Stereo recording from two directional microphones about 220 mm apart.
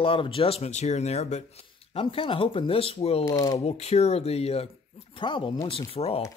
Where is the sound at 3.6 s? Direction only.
30° left (ahead or behind).